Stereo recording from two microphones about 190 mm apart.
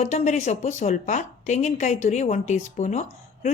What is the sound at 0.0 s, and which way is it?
A woman's voice, 40° left (ahead or behind).